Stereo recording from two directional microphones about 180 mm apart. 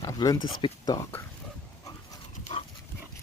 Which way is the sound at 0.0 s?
20° left (ahead or behind).